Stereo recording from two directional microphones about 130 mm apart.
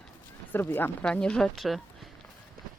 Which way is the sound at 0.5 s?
15° left (ahead or behind).